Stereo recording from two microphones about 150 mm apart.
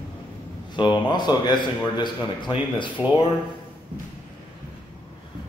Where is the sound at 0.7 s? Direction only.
30° left (ahead or behind).